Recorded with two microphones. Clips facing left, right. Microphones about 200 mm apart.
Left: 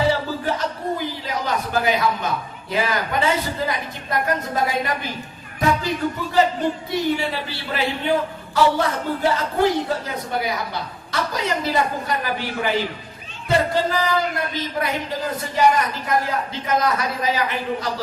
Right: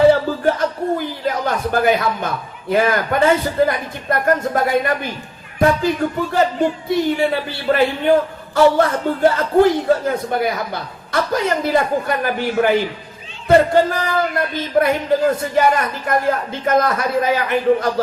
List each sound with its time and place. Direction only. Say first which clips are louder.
0.1 s a man's voice: right 7 dB; 50° right (ahead or behind)